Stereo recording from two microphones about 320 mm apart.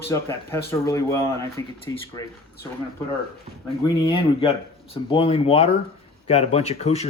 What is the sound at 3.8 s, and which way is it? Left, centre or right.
Speech, centre.